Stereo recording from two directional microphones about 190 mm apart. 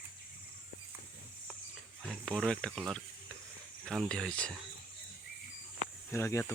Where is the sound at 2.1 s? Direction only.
Centre (ahead or behind).